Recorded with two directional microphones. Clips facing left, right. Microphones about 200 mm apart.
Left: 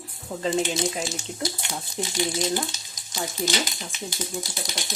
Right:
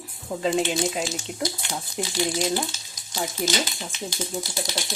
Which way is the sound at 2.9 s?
15° left (ahead or behind).